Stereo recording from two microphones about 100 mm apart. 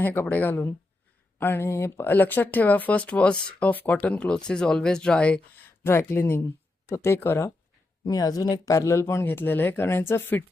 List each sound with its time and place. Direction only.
0.0 s speech: 20° left (ahead or behind)
5.8 s speech: 25° left (ahead or behind)
8.0 s speech: 40° left (ahead or behind); by 10.4 s 20° left (ahead or behind)